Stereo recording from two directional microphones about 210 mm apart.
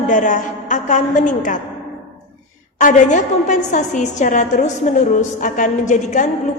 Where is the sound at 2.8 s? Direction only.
35° left (ahead or behind).